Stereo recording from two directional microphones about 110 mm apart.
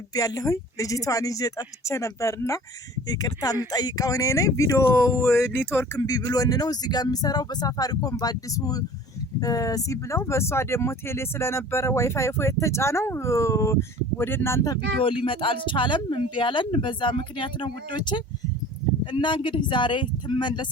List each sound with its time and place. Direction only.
0.1 s speech: 35° left (ahead or behind)
15.2 s speech: 50° left (ahead or behind)